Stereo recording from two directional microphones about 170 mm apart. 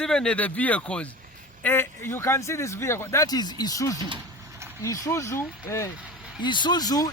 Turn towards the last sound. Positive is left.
turn(degrees=20)  # may be behind; listen again after turning